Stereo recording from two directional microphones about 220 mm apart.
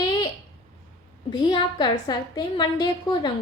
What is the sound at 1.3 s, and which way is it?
A woman's voice, 20° left (ahead or behind).